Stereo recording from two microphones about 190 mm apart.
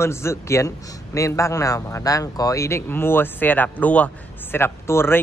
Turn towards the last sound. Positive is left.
turn(degrees=10)  # may be behind; listen again after turning